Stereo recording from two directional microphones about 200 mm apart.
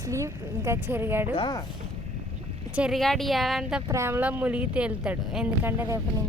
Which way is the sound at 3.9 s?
15° right (ahead or behind).